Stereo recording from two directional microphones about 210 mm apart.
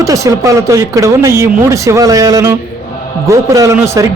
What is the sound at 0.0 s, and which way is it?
A man's voice, 15° right (ahead or behind).